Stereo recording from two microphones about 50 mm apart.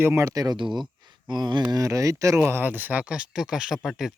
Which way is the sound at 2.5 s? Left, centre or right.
Right.